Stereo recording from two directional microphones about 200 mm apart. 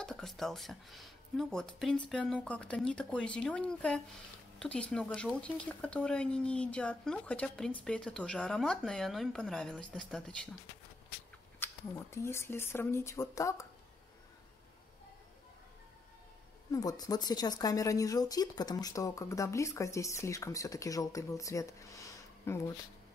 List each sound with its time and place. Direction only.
0.0 s speech: 5° left (ahead or behind)
11.6 s speech: 10° left (ahead or behind)
16.7 s speech: 20° left (ahead or behind)